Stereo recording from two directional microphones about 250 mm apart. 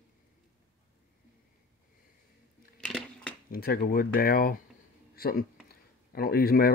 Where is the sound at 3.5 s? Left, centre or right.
Left.